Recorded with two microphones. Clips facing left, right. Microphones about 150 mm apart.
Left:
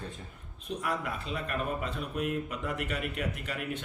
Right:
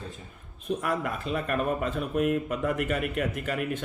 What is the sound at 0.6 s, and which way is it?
A man's voice, 50° right (ahead or behind).